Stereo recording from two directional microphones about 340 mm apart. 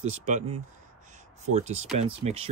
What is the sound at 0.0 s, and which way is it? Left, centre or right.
Speech, right.